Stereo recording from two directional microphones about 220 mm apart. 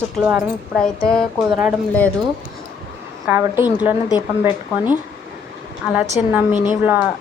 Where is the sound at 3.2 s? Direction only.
5° right (ahead or behind).